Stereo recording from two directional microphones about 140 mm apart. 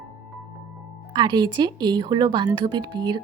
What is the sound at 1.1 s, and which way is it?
Speech, 30° right (ahead or behind).